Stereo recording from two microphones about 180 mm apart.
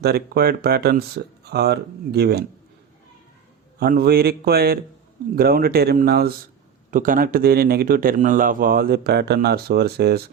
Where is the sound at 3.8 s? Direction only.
60° right (ahead or behind).